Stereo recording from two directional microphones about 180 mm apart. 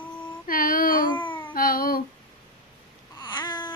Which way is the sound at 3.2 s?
25° left (ahead or behind).